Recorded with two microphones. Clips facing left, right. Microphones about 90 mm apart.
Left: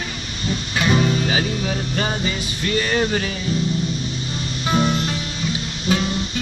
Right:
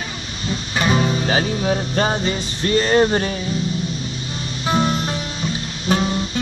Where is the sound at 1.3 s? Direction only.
35° right (ahead or behind).